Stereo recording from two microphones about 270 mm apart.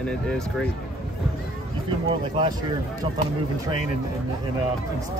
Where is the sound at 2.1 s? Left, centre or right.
Centre.